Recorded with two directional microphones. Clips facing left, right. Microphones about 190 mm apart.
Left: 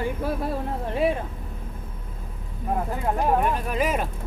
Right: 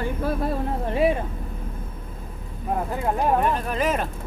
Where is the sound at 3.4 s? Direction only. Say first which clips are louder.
Right 1 dB; 10° left (ahead or behind).